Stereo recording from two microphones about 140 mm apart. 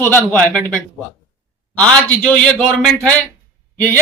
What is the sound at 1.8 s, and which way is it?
A man's voice, 5° left (ahead or behind).